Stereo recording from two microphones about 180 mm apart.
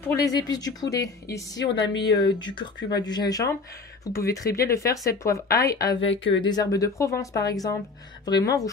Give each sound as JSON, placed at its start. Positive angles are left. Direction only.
{"t": 0.0, "sound": "speech", "side_deg": 15}
{"t": 1.6, "sound": "a woman's voice", "side_deg": 75}
{"t": 2.3, "sound": "speech", "side_deg": 25}